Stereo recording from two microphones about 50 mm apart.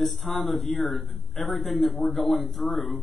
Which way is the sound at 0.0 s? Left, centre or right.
Centre.